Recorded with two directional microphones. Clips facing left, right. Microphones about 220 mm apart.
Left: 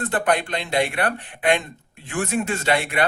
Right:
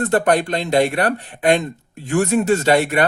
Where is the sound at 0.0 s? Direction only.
40° right (ahead or behind).